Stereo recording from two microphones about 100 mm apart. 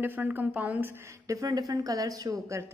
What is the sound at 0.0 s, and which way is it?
A woman's voice, 20° right (ahead or behind).